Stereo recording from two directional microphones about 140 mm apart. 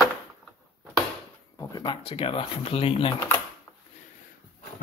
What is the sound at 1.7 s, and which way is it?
Speech, 30° left (ahead or behind).